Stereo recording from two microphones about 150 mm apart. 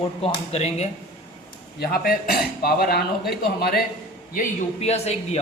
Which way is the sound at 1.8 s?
85° left.